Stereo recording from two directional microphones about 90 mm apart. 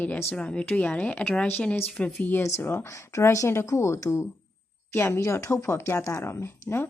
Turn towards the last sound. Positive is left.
turn(degrees=25)  # may be behind; listen again after turning